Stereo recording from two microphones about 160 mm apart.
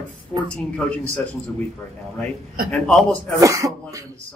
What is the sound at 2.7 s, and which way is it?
Speech, 5° left (ahead or behind).